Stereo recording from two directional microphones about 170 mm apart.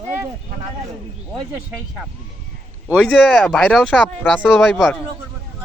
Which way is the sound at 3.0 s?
5° left (ahead or behind).